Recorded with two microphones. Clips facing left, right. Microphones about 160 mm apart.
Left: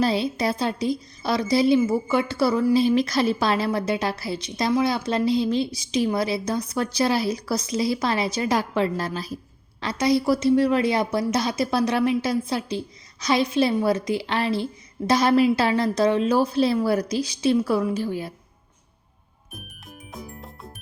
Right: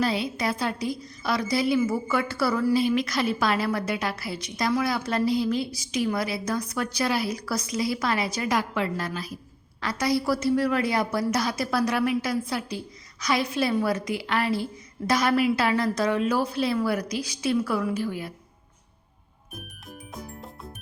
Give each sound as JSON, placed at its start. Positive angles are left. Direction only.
{"t": 0.0, "sound": "a woman's voice", "side_deg": 30}
{"t": 20.1, "sound": "music", "side_deg": 0}